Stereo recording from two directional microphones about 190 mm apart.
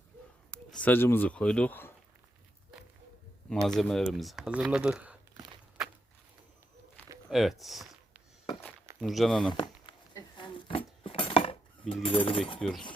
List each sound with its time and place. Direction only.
0.5 s speech: 5° left (ahead or behind)
3.8 s speech: centre (ahead or behind)
7.3 s a sound: centre (ahead or behind)
9.0 s speech: centre (ahead or behind)
9.5 s a sound: 25° left (ahead or behind)
12.0 s speech: 25° left (ahead or behind)
12.5 s speech: 5° left (ahead or behind)